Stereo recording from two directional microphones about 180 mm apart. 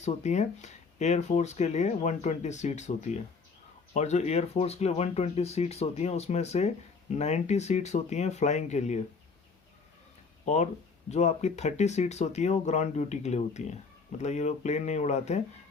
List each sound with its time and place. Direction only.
0.0 s speech: 40° left (ahead or behind)
10.4 s speech: 40° left (ahead or behind)